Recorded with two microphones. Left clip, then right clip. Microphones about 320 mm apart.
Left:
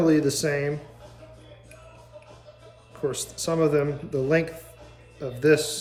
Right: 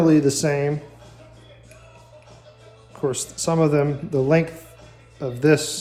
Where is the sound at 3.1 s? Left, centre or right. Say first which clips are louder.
Right 4 dB; centre.